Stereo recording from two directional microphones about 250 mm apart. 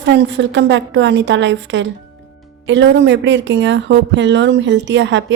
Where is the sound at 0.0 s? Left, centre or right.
Right.